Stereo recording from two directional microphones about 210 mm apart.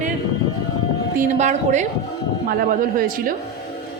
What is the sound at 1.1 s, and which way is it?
A woman's voice, 35° right (ahead or behind).